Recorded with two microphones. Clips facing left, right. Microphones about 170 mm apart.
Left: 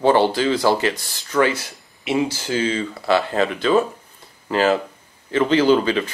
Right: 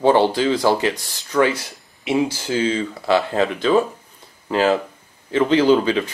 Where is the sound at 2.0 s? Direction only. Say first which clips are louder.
Right 1 dB; 10° right (ahead or behind).